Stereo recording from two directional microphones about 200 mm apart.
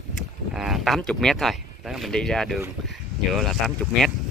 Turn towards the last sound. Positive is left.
turn(degrees=0)  # may be behind; listen again after turning